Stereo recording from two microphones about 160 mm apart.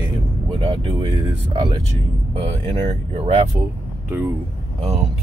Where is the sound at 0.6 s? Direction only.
30° right (ahead or behind).